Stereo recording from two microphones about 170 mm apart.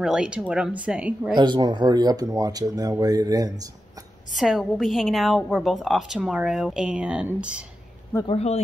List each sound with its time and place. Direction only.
0.0 s a woman's voice: 5° right (ahead or behind)
1.3 s speech: 25° right (ahead or behind)
4.3 s a woman's voice: centre (ahead or behind)
8.3 s speech: 40° left (ahead or behind)